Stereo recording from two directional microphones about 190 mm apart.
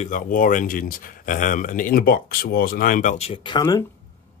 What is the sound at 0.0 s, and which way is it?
Speech, 45° left (ahead or behind).